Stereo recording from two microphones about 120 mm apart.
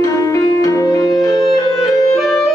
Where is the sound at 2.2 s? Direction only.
Centre (ahead or behind).